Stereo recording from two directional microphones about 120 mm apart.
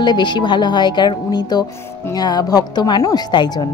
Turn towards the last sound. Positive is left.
turn(degrees=35)  # may be behind; listen again after turning